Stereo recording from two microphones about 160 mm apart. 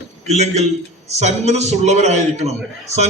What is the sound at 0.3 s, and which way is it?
A man's voice, 45° right (ahead or behind).